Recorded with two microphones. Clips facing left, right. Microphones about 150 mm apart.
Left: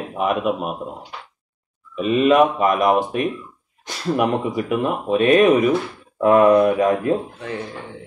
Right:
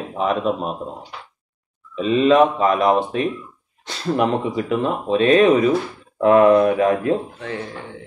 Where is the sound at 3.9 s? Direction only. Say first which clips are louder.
Even; 10° left (ahead or behind).